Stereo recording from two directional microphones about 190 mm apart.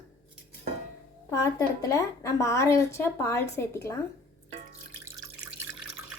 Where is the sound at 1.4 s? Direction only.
20° left (ahead or behind).